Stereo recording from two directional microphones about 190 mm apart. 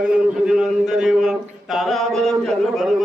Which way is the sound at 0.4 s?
5° right (ahead or behind).